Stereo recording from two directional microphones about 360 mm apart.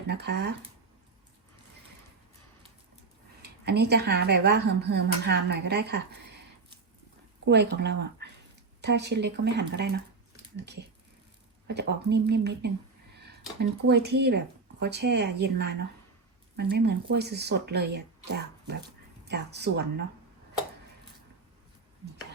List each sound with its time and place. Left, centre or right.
0.1 s speech: right
3.4 s speech: right
7.4 s speech: right